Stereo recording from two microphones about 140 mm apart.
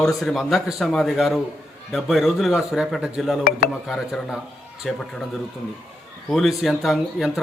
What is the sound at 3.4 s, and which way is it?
Speech, 90° left.